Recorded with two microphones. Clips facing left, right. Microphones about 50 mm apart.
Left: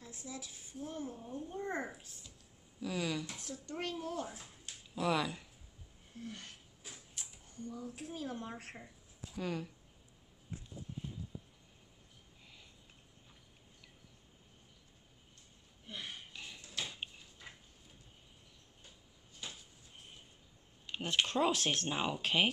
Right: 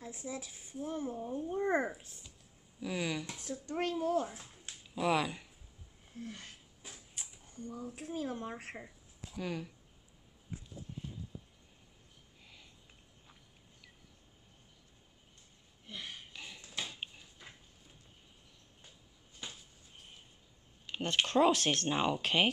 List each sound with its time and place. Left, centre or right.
0.0 s speech: right
2.8 s speech: centre; by 4.5 s right
4.9 s speech: centre
6.2 s speech: centre
6.9 s a sound: centre
7.8 s speech: centre
15.9 s a sound: centre
16.3 s a sound: centre
20.9 s speech: centre